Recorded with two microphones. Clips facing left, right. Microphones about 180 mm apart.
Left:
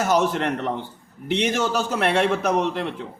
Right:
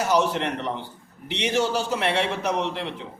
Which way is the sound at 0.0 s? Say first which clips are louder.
Left 2 dB; 50° left (ahead or behind).